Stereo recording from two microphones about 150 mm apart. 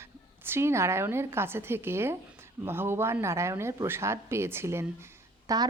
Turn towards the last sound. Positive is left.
turn(degrees=-20)  # may be behind; listen again after turning